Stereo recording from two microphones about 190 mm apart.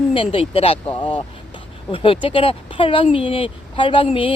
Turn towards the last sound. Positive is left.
turn(degrees=30)  # may be behind; listen again after turning